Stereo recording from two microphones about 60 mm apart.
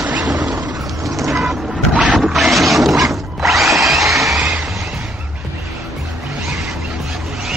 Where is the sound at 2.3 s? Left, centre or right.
Centre.